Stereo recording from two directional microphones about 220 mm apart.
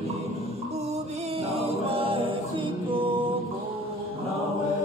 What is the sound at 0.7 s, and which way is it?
Music, 30° right (ahead or behind).